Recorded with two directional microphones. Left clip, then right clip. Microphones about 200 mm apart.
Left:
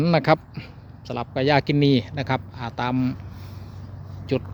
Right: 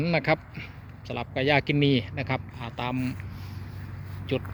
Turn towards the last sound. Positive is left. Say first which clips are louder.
# left 4 dB
turn(degrees=20)  # may be behind; listen again after turning